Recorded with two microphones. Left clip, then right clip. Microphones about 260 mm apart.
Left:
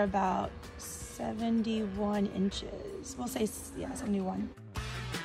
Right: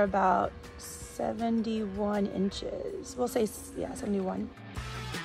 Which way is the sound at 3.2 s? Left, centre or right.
Right.